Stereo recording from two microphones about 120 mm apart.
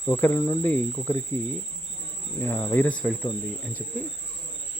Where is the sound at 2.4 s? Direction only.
20° left (ahead or behind).